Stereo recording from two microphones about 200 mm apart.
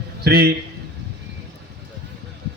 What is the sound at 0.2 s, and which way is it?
Speech, 50° right (ahead or behind).